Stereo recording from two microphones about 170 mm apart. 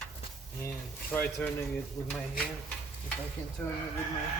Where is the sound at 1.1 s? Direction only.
10° left (ahead or behind).